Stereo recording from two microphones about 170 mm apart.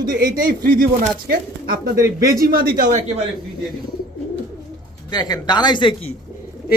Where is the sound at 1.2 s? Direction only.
65° right (ahead or behind).